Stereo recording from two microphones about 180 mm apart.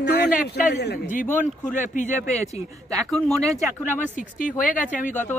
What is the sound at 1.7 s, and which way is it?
Speech, 45° left (ahead or behind).